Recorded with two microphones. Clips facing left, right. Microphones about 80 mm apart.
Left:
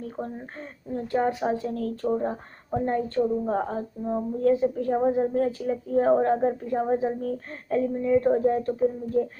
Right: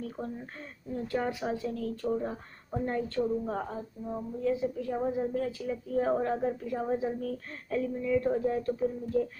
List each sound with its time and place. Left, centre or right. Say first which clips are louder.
0.9 s a woman's voice: left 7 dB; left
3.6 s a woman's voice: left 8 dB; left